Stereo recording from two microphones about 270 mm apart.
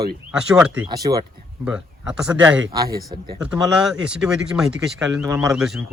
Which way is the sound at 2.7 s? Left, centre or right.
Centre.